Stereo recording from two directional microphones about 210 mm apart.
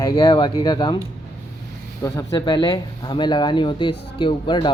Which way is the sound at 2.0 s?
15° left (ahead or behind).